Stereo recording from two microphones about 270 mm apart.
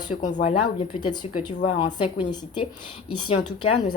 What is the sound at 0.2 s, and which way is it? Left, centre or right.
Speech, left.